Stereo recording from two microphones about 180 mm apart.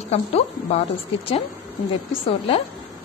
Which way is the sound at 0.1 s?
35° left (ahead or behind).